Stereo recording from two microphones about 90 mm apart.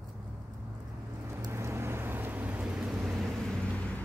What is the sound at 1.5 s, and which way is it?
Vehicle, 30° right (ahead or behind).